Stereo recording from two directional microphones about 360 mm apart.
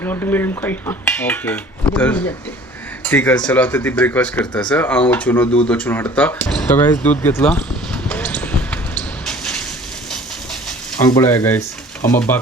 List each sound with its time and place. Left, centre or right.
0.0 s speech: centre
8.1 s basketball bounce: centre
9.2 s a sound: centre
11.1 s speech: centre
12.0 s speech: left